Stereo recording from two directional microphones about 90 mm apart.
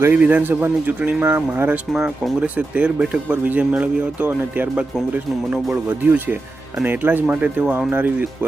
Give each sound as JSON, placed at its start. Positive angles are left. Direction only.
{"t": 0.0, "sound": "speech", "side_deg": -20}
{"t": 1.9, "sound": "speech", "side_deg": -5}